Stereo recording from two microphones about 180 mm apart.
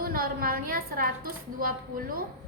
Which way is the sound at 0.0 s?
55° right (ahead or behind).